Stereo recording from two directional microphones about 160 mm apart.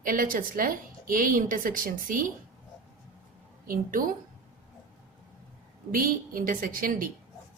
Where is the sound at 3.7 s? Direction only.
60° right (ahead or behind).